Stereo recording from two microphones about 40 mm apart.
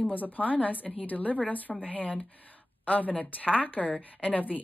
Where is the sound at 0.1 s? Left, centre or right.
Left.